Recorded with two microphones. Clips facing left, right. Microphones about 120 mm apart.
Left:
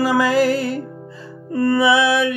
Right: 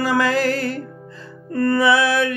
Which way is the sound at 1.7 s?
5° left (ahead or behind).